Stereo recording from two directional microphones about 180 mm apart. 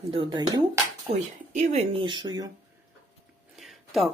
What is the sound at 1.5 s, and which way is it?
Speech, 40° right (ahead or behind).